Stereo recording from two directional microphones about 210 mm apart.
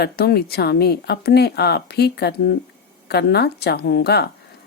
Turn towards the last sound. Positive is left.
turn(degrees=50)  # may be behind; listen again after turning